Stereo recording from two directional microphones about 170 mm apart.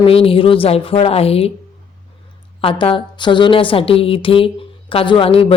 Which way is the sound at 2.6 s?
35° left (ahead or behind).